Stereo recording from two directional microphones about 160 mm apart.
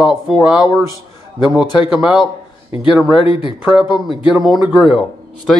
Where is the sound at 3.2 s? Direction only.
35° left (ahead or behind).